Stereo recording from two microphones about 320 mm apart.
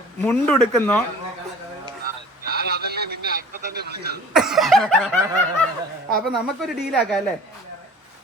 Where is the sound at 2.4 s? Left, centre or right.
Right.